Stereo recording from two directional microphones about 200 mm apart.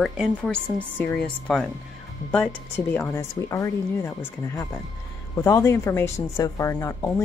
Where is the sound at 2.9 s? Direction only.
10° left (ahead or behind).